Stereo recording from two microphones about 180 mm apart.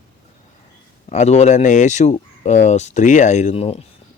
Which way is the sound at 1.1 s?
40° left (ahead or behind).